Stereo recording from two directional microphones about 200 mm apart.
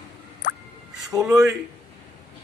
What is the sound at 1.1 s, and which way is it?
Speech, 15° right (ahead or behind).